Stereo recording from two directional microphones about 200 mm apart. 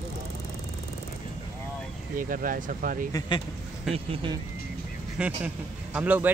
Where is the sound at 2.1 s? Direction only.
45° right (ahead or behind).